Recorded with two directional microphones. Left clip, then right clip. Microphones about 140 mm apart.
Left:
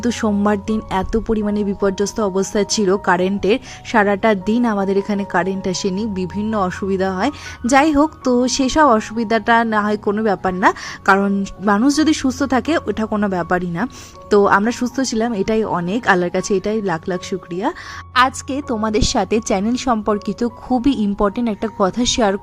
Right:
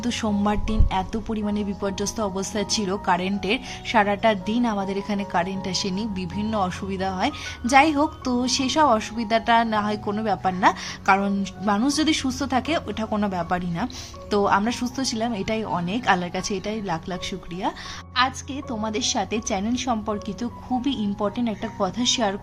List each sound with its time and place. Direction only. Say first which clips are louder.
0.0 s speech: left 6 dB; 40° left (ahead or behind)
13.1 s speech: left 5 dB; 25° left (ahead or behind)
13.3 s speech: left 7 dB; 35° left (ahead or behind)
18.1 s a woman's voice: left 8 dB; 50° left (ahead or behind)